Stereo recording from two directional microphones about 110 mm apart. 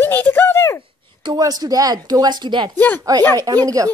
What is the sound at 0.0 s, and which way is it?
Speech, 20° left (ahead or behind).